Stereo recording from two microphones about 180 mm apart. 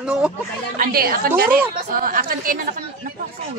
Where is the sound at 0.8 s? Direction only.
55° right (ahead or behind).